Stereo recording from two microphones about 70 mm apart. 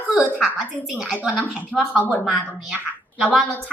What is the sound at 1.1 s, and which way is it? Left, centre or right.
Speech, centre.